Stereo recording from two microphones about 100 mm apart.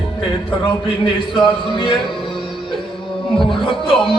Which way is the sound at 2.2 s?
55° left (ahead or behind).